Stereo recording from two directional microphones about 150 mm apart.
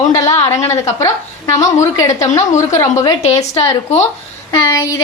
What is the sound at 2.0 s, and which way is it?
A woman's voice, 20° left (ahead or behind).